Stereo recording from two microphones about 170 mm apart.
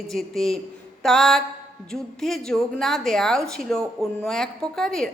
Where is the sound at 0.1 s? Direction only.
Centre (ahead or behind).